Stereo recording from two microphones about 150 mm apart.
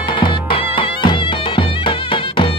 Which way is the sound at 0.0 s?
35° left (ahead or behind).